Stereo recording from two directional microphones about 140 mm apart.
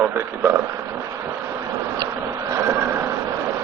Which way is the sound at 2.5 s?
20° right (ahead or behind).